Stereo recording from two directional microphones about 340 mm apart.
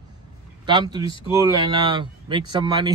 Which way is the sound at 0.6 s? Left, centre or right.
Centre.